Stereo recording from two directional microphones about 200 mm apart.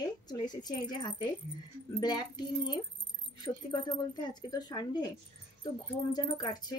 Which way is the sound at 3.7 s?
20° left (ahead or behind).